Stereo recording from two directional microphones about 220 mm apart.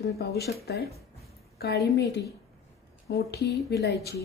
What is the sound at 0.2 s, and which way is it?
Speech, 45° left (ahead or behind).